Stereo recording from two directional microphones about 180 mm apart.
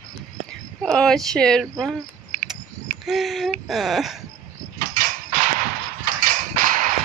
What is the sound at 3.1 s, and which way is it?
Speech, centre (ahead or behind).